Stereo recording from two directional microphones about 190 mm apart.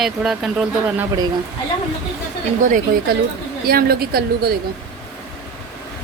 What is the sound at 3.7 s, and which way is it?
Speech, 55° right (ahead or behind).